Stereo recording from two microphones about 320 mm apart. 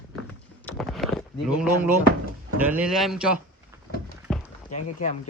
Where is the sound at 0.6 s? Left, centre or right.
Centre.